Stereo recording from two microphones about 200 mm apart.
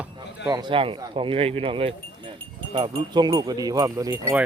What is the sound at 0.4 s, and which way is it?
Speech, 25° right (ahead or behind).